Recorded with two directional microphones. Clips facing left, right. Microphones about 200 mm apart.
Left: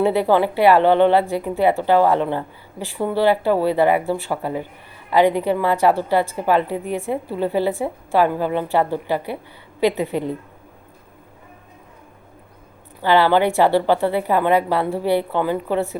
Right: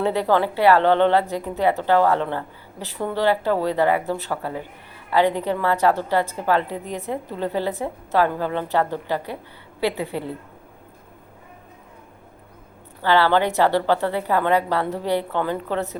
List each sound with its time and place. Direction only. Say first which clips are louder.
0.0 s a woman's voice: left 3 dB; 15° left (ahead or behind)
13.0 s a woman's voice: left 3 dB; 15° left (ahead or behind)